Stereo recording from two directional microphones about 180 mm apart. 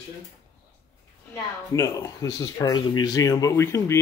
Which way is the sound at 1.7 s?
15° left (ahead or behind).